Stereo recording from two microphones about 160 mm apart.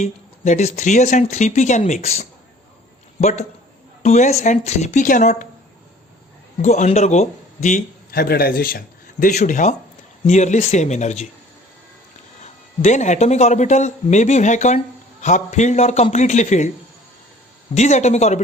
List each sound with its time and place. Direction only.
0.0 s a man's voice: 45° left (ahead or behind)
6.6 s a man's voice: 45° left (ahead or behind)
8.2 s a man's voice: 75° left (ahead or behind)
9.2 s a man's voice: 50° left (ahead or behind)
12.4 s a man's voice: 45° left (ahead or behind)
17.7 s a man's voice: 45° left (ahead or behind)